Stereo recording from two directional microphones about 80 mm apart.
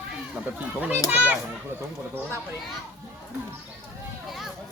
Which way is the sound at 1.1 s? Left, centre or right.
Right.